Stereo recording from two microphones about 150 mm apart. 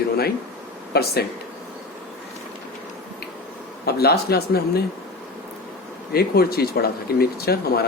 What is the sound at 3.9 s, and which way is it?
Speech, 90° left.